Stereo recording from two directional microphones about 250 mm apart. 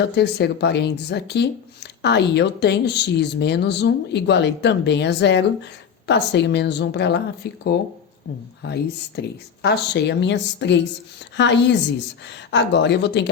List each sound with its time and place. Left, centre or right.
0.0 s speech: left
8.6 s speech: left